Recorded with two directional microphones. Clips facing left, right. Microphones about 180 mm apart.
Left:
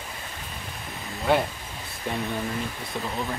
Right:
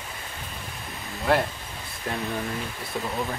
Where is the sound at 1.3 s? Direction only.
Centre (ahead or behind).